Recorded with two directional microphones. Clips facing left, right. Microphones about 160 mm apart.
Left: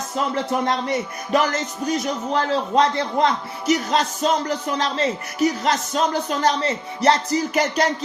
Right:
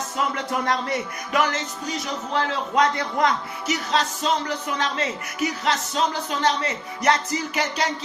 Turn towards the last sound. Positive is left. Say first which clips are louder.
# left 5 dB
turn(degrees=40)  # may be behind; listen again after turning